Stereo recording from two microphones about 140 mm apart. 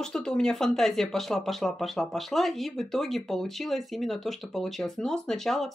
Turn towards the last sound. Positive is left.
turn(degrees=0)  # may be behind; listen again after turning